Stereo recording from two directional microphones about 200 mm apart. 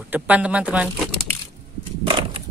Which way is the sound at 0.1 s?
5° right (ahead or behind).